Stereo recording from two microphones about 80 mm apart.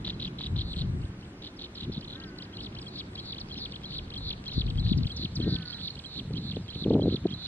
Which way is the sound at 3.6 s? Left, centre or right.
Left.